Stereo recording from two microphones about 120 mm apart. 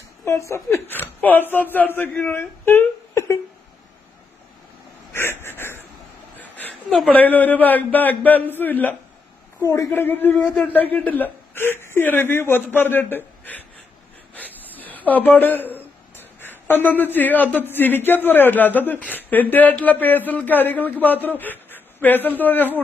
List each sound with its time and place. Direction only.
0.3 s a man's voice: 25° left (ahead or behind)
5.1 s a sound: 20° left (ahead or behind)
7.1 s a man's voice: 15° left (ahead or behind)
9.6 s a man's voice: 25° left (ahead or behind)
14.7 s a woman's voice: 15° left (ahead or behind)